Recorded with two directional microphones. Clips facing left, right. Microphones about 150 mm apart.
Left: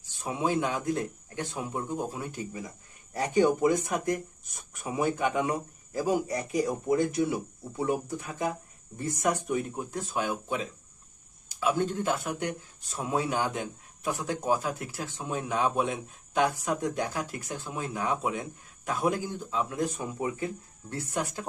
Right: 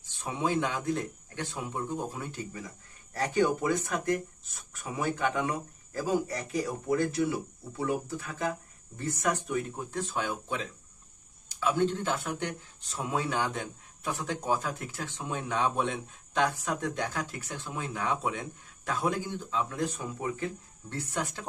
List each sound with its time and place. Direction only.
0.2 s speech: 10° left (ahead or behind)